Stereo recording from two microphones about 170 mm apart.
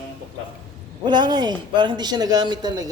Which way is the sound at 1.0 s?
25° right (ahead or behind).